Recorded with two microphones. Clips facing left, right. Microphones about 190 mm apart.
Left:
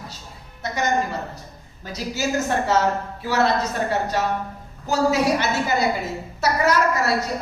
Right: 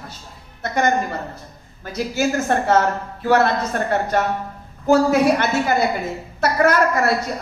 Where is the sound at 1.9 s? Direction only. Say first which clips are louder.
Right 4 dB; 55° right (ahead or behind).